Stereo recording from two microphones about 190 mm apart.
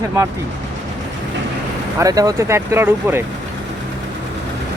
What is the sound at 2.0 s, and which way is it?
Speech, 20° right (ahead or behind).